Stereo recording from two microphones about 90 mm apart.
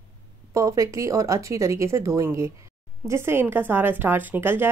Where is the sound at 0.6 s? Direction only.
35° right (ahead or behind).